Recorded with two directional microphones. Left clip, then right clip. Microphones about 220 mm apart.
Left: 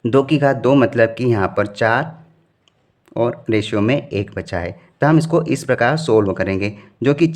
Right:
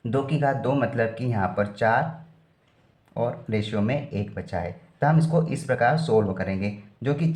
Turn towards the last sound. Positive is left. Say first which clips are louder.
# left 12 dB
turn(degrees=50)  # may be behind; listen again after turning